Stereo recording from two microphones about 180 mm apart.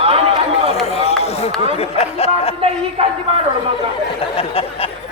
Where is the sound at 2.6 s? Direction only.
35° right (ahead or behind).